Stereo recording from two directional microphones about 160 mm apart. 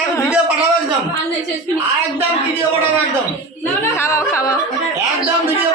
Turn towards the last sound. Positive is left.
turn(degrees=20)  # may be behind; listen again after turning